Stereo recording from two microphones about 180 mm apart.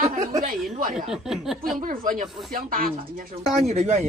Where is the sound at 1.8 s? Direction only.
50° right (ahead or behind).